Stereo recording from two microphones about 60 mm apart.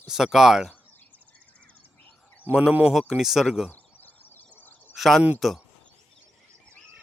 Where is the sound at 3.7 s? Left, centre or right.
Left.